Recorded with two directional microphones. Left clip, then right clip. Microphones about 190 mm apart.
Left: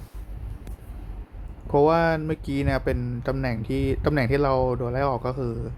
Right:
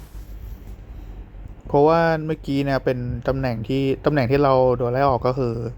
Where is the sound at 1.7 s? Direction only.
15° right (ahead or behind).